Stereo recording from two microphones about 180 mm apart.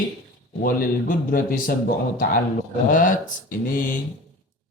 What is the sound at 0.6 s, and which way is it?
Speech, 55° left (ahead or behind).